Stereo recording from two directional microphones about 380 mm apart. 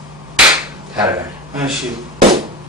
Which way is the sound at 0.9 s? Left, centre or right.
Centre.